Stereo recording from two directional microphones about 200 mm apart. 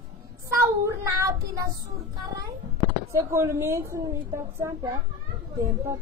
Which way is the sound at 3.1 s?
15° right (ahead or behind).